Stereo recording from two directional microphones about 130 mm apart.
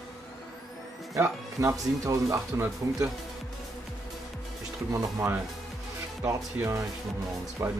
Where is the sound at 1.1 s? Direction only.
20° right (ahead or behind).